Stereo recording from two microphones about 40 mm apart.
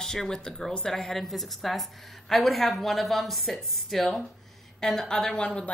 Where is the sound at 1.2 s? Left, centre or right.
Centre.